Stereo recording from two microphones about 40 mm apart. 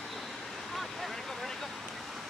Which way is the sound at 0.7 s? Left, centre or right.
Centre.